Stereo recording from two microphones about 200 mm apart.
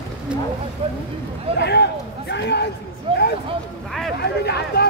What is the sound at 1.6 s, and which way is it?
Speech, 55° left (ahead or behind).